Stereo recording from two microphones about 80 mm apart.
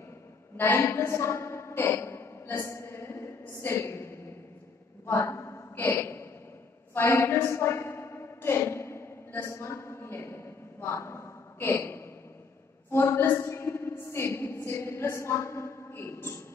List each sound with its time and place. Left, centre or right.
0.6 s a woman's voice: left
5.0 s a sound: left
12.9 s a woman's voice: left